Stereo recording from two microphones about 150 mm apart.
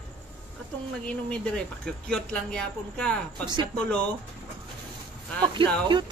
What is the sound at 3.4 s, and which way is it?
Speech, 30° right (ahead or behind).